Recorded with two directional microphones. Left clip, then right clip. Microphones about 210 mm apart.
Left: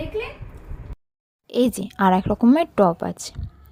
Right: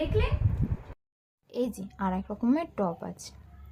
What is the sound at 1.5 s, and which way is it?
A woman's voice, 40° left (ahead or behind).